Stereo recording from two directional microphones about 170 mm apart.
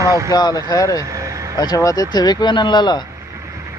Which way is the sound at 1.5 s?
20° left (ahead or behind).